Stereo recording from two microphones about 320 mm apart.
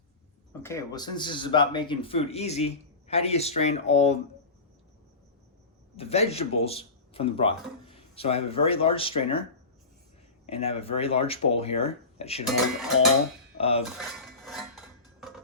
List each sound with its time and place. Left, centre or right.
0.6 s speech: centre
6.0 s speech: centre
10.5 s speech: centre
13.6 s speech: centre
14.0 s cutlery: centre